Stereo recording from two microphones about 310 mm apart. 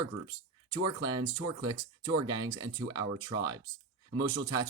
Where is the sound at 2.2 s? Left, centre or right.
Centre.